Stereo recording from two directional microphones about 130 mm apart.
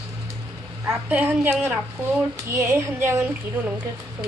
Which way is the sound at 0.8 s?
15° right (ahead or behind).